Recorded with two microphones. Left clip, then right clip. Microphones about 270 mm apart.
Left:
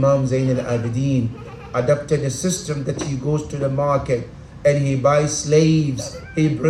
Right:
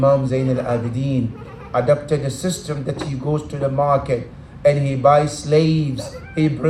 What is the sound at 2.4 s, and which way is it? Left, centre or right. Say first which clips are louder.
A man's voice: even; centre.